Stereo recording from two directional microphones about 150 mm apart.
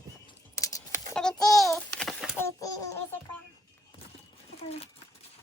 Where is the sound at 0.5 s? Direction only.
20° left (ahead or behind).